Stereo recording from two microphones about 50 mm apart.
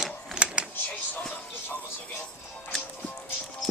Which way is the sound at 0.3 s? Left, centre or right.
Right.